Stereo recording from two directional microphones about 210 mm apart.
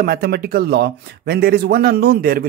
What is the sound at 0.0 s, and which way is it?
Speech, 45° right (ahead or behind).